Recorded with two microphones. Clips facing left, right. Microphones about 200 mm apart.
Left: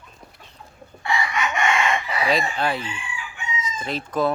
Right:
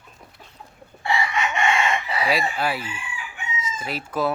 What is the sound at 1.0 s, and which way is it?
Chicken, 30° right (ahead or behind).